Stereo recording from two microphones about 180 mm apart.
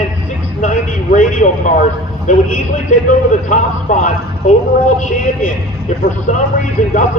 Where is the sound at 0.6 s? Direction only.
45° left (ahead or behind).